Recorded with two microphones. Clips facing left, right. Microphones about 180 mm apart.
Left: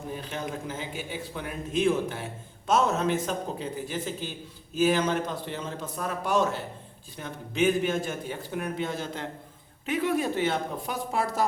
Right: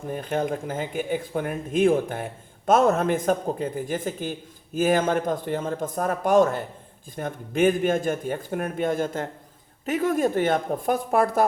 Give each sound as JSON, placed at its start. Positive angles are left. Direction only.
{"t": 0.1, "sound": "speech", "side_deg": -50}